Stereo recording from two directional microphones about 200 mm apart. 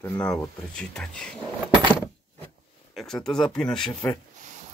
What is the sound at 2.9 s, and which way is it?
Speech, centre (ahead or behind).